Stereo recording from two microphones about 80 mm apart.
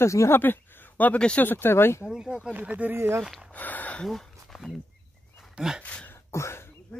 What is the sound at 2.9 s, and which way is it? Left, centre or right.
Speech, right.